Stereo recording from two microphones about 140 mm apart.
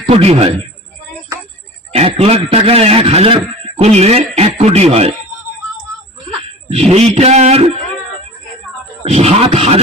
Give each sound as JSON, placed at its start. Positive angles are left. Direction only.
{"t": 0.1, "sound": "a man's voice", "side_deg": -45}
{"t": 1.9, "sound": "a man's voice", "side_deg": -45}
{"t": 6.7, "sound": "a man's voice", "side_deg": -50}
{"t": 9.0, "sound": "a man's voice", "side_deg": -50}